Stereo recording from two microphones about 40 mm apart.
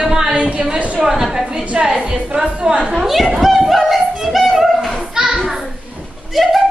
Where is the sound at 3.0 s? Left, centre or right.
Centre.